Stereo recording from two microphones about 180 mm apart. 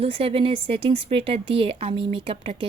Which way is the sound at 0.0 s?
30° right (ahead or behind).